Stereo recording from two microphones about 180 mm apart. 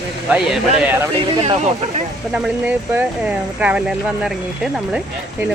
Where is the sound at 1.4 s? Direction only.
35° right (ahead or behind).